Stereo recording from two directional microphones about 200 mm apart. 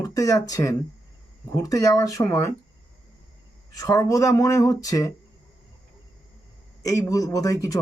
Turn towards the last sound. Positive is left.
turn(degrees=15)  # may be behind; listen again after turning